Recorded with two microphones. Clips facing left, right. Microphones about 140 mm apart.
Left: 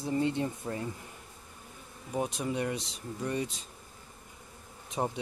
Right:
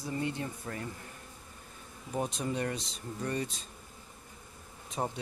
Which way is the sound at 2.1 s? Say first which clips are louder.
Left 1 dB; 10° left (ahead or behind).